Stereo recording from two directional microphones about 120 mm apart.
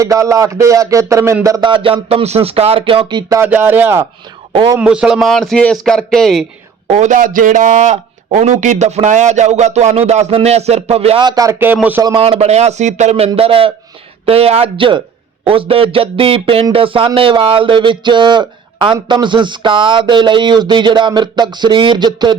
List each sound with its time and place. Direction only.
0.0 s speech: 25° right (ahead or behind)
1.6 s speech: 45° right (ahead or behind)
3.2 s speech: 30° right (ahead or behind)
3.4 s speech: 15° right (ahead or behind)
4.8 s a man's voice: 5° right (ahead or behind)
6.8 s speech: 70° right (ahead or behind)
11.2 s speech: 35° right (ahead or behind)
11.6 s speech: 15° right (ahead or behind)
12.2 s speech: 55° right (ahead or behind); by 22.4 s 40° right (ahead or behind)